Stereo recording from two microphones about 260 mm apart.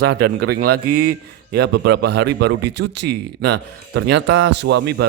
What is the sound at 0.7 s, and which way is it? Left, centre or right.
Speech, right.